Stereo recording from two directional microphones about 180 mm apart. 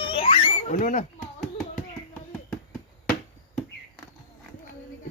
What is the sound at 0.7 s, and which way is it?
Speech, 45° left (ahead or behind).